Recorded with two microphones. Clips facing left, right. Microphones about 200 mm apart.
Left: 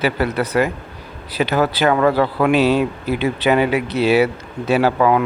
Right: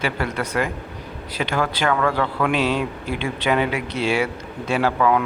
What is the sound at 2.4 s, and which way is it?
Speech, 10° left (ahead or behind).